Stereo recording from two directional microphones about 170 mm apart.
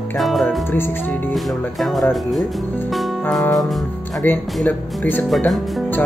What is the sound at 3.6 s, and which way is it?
Music, centre (ahead or behind).